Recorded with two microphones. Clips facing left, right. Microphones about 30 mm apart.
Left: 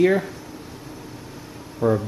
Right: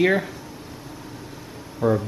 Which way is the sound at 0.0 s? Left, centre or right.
Centre.